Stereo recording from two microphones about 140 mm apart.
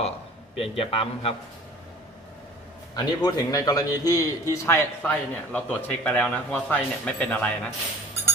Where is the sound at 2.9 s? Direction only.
30° left (ahead or behind); by 7.5 s 10° left (ahead or behind).